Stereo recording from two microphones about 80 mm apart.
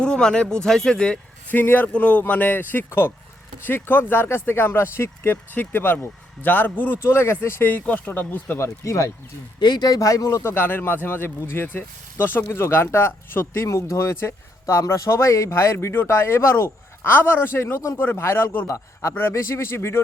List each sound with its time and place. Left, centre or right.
0.0 s speech: centre
1.5 s speech: left
8.5 s speech: left
9.6 s speech: left
10.0 s speech: left